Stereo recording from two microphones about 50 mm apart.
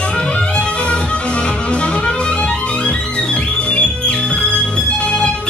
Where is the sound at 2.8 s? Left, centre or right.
Left.